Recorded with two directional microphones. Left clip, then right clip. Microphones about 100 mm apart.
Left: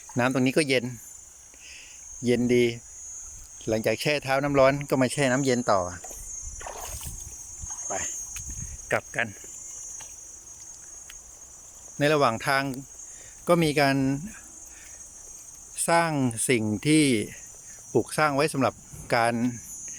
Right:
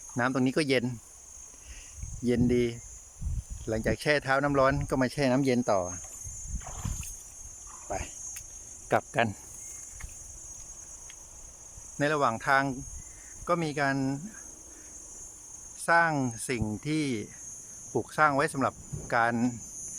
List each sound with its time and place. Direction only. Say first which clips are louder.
0.2 s speech: left 4 dB; centre (ahead or behind)
2.4 s speech: left 5 dB; 5° right (ahead or behind)
5.2 s speech: left 3 dB; 20° right (ahead or behind)
7.9 s speech: left 3 dB; 15° right (ahead or behind)
8.9 s speech: right 1 dB; 25° right (ahead or behind)
11.9 s speech: left 5 dB; 5° left (ahead or behind)
13.4 s speech: left 6 dB; 20° left (ahead or behind)
15.9 s speech: left 1 dB; 20° left (ahead or behind)
19.4 s cricket: left 1 dB; 5° right (ahead or behind)